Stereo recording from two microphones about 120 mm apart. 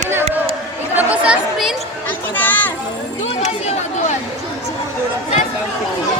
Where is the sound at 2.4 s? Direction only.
15° left (ahead or behind).